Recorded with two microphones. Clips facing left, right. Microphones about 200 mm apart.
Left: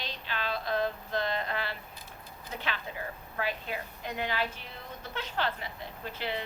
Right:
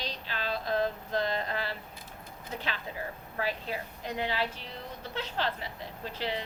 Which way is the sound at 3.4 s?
35° right (ahead or behind).